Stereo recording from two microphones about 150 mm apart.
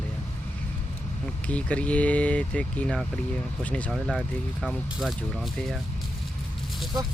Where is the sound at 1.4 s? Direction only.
10° left (ahead or behind).